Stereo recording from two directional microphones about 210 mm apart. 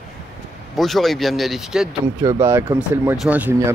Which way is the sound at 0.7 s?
Centre (ahead or behind).